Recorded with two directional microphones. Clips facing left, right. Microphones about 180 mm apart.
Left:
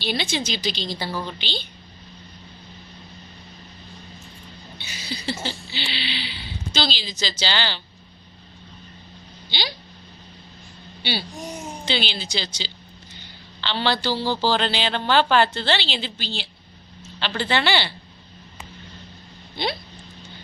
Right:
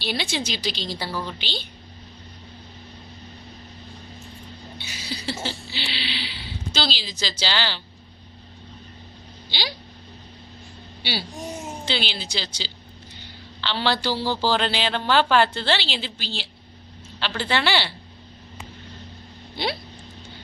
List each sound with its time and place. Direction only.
0.0 s a woman's voice: 5° right (ahead or behind)
4.8 s a sound: centre (ahead or behind)
5.2 s a woman's voice: centre (ahead or behind)
9.5 s a woman's voice: 5° right (ahead or behind)
11.0 s a woman's voice: 5° right (ahead or behind)